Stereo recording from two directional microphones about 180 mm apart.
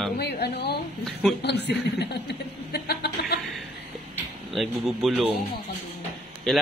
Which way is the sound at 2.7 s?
65° left (ahead or behind).